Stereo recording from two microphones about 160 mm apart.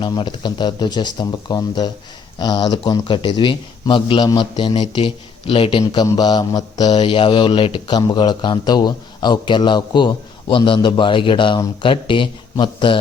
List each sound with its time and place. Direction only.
0.0 s speech: 30° left (ahead or behind)